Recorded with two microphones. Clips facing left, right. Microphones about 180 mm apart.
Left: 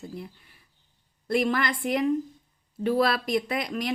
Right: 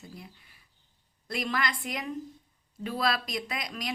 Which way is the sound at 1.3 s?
55° left (ahead or behind).